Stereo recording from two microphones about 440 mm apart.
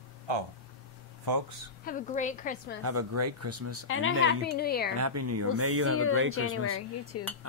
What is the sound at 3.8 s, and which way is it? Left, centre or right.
A woman's voice, left.